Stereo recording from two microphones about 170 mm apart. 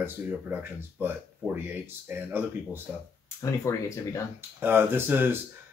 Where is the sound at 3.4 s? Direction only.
20° left (ahead or behind).